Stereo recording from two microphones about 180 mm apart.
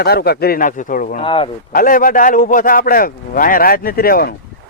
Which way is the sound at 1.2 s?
30° left (ahead or behind).